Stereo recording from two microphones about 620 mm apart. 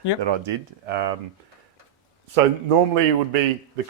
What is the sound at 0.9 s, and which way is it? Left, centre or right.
Speech, right.